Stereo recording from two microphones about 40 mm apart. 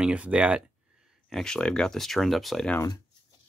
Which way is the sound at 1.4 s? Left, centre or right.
Centre.